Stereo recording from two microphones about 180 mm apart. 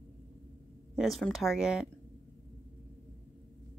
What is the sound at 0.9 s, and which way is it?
Speech, centre (ahead or behind).